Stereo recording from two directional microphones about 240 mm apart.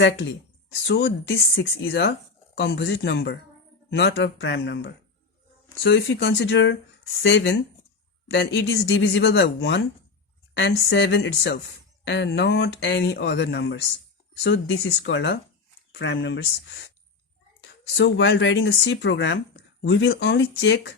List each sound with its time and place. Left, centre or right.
0.0 s speech: left